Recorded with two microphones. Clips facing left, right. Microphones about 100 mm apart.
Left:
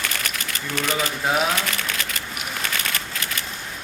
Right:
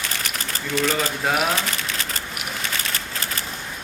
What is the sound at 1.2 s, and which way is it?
Speech, centre (ahead or behind).